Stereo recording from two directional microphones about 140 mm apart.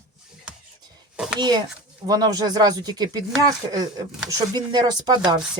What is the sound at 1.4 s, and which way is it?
Speech, 30° right (ahead or behind).